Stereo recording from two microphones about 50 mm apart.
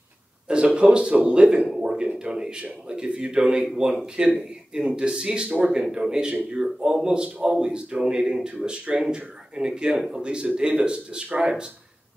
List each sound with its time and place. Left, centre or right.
0.5 s speech: centre
1.7 s a sound: centre
2.1 s speech: centre
7.2 s speech: right